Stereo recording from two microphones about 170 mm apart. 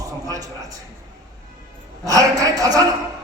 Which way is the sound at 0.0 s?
20° right (ahead or behind).